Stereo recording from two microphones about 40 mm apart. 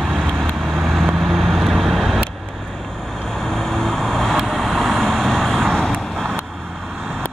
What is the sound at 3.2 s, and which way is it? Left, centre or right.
Vehicle, centre.